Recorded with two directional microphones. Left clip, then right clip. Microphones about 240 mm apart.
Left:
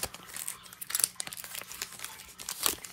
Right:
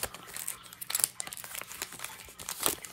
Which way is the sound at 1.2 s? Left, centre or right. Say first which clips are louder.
Even; centre.